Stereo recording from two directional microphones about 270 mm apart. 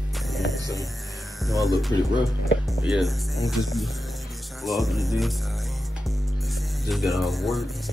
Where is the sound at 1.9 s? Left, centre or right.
Centre.